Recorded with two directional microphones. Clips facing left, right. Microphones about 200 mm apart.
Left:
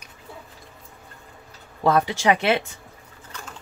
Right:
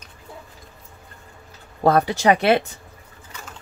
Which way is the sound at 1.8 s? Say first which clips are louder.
Right 3 dB; 40° right (ahead or behind).